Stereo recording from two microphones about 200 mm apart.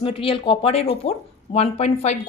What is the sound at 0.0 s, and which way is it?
A woman's voice, 25° left (ahead or behind).